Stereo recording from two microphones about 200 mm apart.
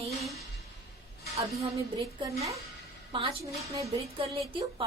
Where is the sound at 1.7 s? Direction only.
15° right (ahead or behind).